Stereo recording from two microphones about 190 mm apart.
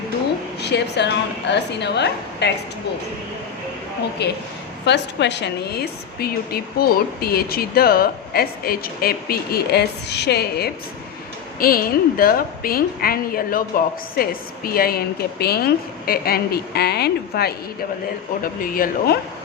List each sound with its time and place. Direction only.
0.6 s a woman's voice: 60° left (ahead or behind)
4.2 s a woman's voice: 60° left (ahead or behind)